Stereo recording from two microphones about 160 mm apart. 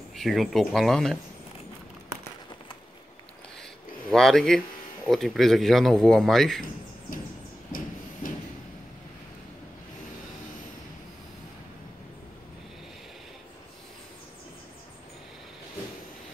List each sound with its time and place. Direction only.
0.1 s speech: centre (ahead or behind)
4.1 s speech: centre (ahead or behind)
7.7 s a sound: 60° left (ahead or behind)